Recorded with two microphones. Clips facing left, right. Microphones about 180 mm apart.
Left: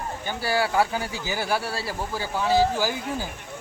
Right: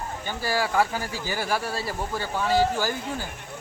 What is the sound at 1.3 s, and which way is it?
Speech, 5° left (ahead or behind).